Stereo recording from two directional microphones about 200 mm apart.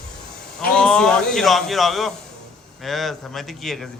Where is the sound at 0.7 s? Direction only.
5° left (ahead or behind).